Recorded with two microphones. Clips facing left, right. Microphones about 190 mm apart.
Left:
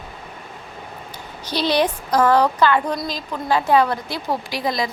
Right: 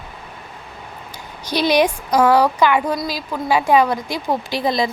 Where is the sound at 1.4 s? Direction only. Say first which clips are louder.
Right 3 dB; 15° right (ahead or behind).